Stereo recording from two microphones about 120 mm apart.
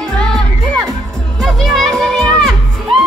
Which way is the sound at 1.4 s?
Centre (ahead or behind).